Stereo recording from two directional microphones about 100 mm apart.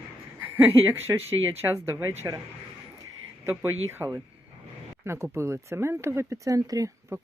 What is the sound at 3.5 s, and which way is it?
Speech, 20° right (ahead or behind).